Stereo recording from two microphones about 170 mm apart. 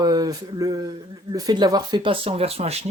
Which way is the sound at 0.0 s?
20° right (ahead or behind).